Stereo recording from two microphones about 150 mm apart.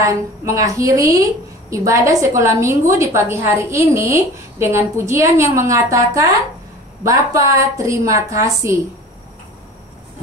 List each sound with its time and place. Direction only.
0.0 s a woman's voice: 20° right (ahead or behind)